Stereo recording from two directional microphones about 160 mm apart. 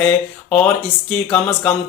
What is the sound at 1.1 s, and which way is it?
Speech, 5° left (ahead or behind).